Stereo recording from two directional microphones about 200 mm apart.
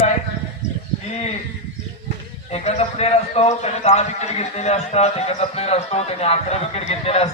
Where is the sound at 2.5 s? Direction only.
30° left (ahead or behind).